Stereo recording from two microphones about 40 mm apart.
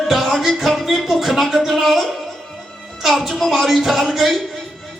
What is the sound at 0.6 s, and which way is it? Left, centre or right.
A woman's voice, centre.